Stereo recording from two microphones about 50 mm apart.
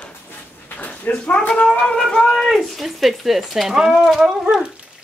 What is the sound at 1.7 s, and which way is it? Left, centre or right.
Speech, centre.